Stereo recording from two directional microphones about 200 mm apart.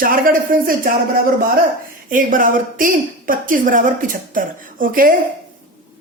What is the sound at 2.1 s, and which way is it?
A woman's voice, 45° right (ahead or behind).